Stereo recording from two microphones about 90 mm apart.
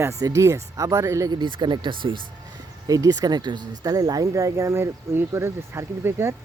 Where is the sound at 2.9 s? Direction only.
45° right (ahead or behind).